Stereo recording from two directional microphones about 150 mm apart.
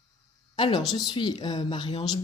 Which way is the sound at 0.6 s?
30° left (ahead or behind).